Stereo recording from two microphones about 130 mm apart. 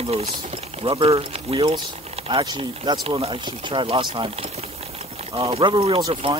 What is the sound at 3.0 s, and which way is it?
Speech, 45° right (ahead or behind).